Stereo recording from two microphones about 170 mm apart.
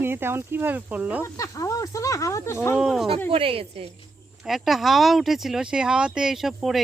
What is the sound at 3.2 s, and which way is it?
Speech, 35° right (ahead or behind).